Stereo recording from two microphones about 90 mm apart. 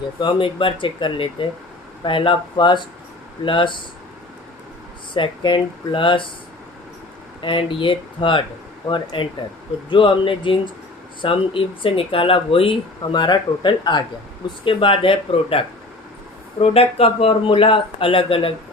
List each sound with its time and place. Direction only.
0.2 s speech: 65° left (ahead or behind)
5.1 s speech: 65° left (ahead or behind)
7.4 s speech: 70° left (ahead or behind)
11.2 s speech: 90° left
13.1 s speech: 60° left (ahead or behind)
14.6 s speech: 80° left
16.6 s speech: 90° left